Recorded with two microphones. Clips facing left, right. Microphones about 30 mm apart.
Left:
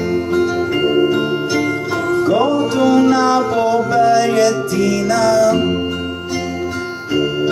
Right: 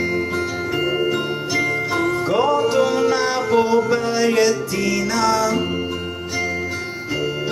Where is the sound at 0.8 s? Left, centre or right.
Centre.